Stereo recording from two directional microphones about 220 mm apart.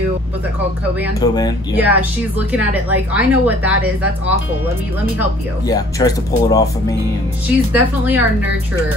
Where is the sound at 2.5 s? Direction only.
5° right (ahead or behind).